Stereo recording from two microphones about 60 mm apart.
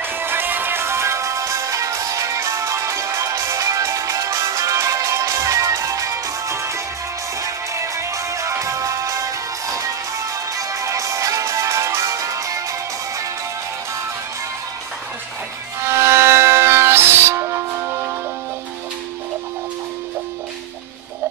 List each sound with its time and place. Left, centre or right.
0.0 s music: right
15.9 s music: right